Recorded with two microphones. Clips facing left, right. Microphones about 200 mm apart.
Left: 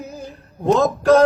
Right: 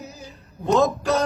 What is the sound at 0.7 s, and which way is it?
Singing, centre (ahead or behind).